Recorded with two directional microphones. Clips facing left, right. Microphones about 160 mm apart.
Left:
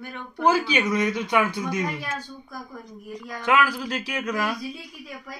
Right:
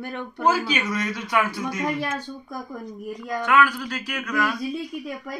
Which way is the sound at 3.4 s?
30° left (ahead or behind).